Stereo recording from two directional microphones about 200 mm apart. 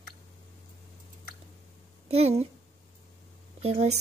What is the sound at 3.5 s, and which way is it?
Speech, 35° right (ahead or behind).